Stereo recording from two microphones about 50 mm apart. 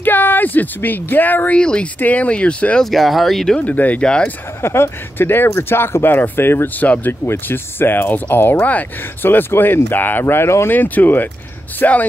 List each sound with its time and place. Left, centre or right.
0.0 s speech: left
1.6 s speech: centre
2.0 s speech: left
2.8 s speech: centre
3.5 s speech: left
4.0 s speech: centre
4.6 s speech: left
10.7 s speech: left